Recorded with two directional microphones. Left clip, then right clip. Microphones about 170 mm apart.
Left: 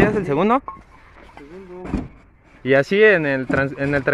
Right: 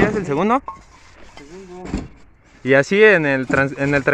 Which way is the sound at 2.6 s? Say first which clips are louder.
Right 2 dB; 15° right (ahead or behind).